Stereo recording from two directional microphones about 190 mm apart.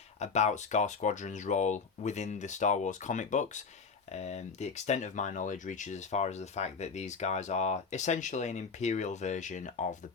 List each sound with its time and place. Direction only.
0.2 s speech: 35° left (ahead or behind)